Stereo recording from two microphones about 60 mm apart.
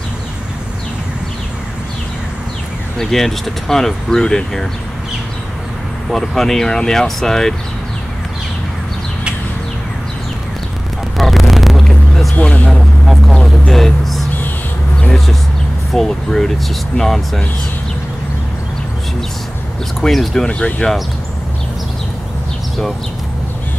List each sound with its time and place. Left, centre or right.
3.0 s speech: centre
6.0 s speech: centre
11.1 s vehicle: centre
15.9 s speech: centre
20.0 s speech: centre
20.4 s speech: centre